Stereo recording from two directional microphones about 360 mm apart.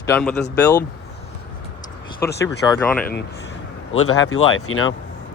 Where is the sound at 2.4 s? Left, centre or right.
Centre.